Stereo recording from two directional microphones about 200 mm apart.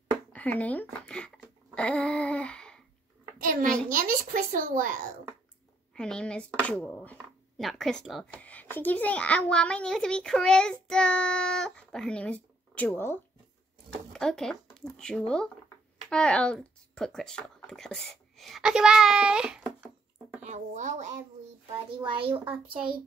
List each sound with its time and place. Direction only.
0.3 s speech: 5° left (ahead or behind)
1.0 s a sound: 5° left (ahead or behind)
3.7 s a child's voice: 45° right (ahead or behind)
5.9 s a child's voice: 5° left (ahead or behind)
20.4 s speech: 35° right (ahead or behind)
21.9 s a child's voice: 25° right (ahead or behind)